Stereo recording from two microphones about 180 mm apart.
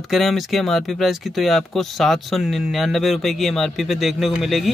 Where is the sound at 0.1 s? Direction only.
Centre (ahead or behind).